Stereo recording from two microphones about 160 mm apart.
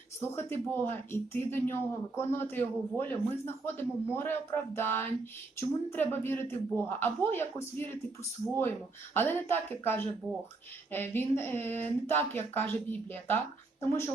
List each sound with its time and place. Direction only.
0.2 s speech: 15° left (ahead or behind)
9.1 s speech: 15° left (ahead or behind)